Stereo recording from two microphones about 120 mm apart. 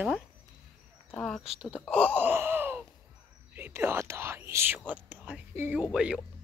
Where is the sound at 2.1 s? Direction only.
20° right (ahead or behind).